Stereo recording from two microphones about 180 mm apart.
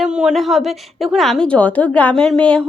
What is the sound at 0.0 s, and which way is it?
A woman's voice, 5° right (ahead or behind).